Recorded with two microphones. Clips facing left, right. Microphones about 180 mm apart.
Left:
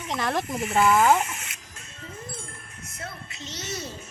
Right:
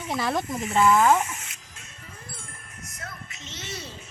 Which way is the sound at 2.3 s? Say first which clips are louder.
Left 4 dB; 25° left (ahead or behind).